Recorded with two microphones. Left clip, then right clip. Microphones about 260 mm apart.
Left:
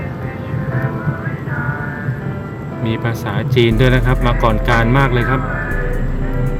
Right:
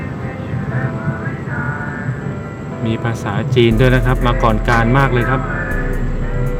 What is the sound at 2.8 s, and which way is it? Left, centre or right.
Speech, centre.